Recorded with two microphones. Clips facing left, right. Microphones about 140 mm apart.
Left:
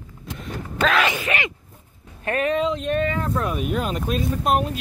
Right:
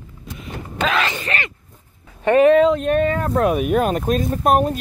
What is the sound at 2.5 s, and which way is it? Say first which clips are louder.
Speech: right 8 dB; 55° right (ahead or behind).